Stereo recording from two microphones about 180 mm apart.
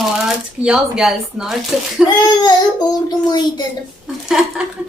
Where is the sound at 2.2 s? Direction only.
25° left (ahead or behind).